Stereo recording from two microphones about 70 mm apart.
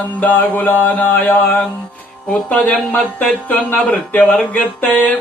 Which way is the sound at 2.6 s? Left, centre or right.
Left.